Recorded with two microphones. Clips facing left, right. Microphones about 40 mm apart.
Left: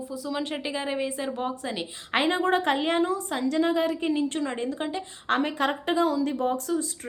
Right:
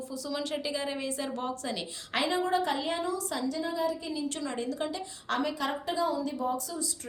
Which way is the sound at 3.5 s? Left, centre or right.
Left.